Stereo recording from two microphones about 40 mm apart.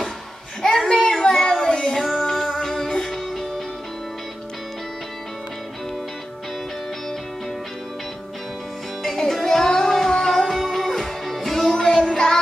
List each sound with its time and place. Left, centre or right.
0.6 s a sound: centre
1.7 s music: centre
2.0 s music: centre
9.3 s child singing: centre
10.4 s music: centre